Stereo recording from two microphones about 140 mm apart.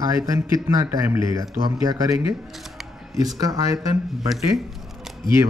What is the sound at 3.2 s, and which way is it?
Speech, 25° right (ahead or behind).